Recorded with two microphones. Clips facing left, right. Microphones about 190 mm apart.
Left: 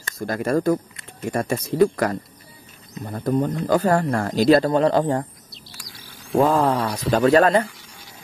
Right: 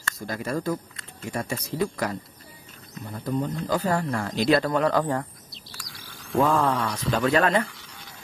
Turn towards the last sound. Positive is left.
turn(degrees=40)  # may be behind; listen again after turning